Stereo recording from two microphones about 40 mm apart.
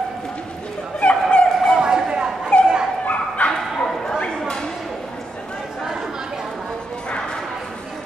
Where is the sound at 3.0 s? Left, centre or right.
Left.